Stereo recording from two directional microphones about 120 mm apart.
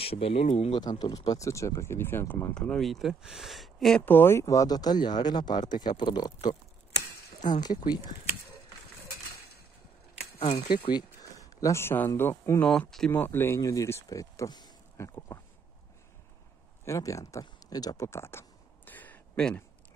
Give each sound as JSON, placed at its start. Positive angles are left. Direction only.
{"t": 0.0, "sound": "speech", "side_deg": 55}
{"t": 0.7, "sound": "speech", "side_deg": 35}
{"t": 2.5, "sound": "speech", "side_deg": 10}
{"t": 4.0, "sound": "speech", "side_deg": 15}
{"t": 7.6, "sound": "speech", "side_deg": 35}
{"t": 10.4, "sound": "speech", "side_deg": 45}
{"t": 11.1, "sound": "speech", "side_deg": 25}
{"t": 13.1, "sound": "speech", "side_deg": 15}
{"t": 15.0, "sound": "a sound", "side_deg": 25}
{"t": 16.8, "sound": "speech", "side_deg": 25}
{"t": 18.9, "sound": "a sound", "side_deg": 15}